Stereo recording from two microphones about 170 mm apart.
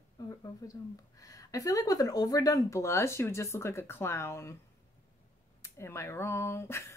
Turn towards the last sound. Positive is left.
turn(degrees=15)  # may be behind; listen again after turning